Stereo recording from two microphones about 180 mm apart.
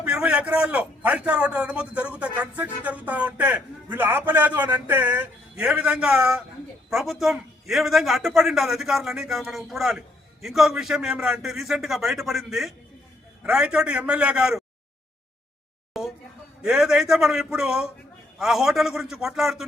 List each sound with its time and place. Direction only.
0.0 s a man's voice: 5° right (ahead or behind)
15.9 s a sound: centre (ahead or behind)
16.6 s a man's voice: 5° right (ahead or behind)